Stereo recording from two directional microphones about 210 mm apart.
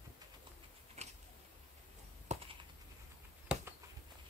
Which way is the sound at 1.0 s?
30° right (ahead or behind).